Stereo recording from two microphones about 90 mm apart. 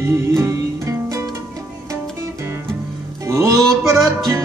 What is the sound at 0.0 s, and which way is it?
Music, 35° right (ahead or behind).